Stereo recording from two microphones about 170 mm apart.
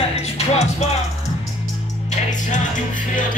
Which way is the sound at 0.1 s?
40° left (ahead or behind).